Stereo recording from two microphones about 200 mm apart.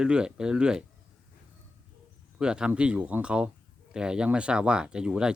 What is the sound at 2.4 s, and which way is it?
Speech, 5° right (ahead or behind).